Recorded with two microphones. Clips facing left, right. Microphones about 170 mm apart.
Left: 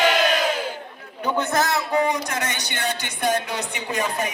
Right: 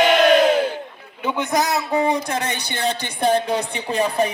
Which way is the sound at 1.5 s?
20° right (ahead or behind).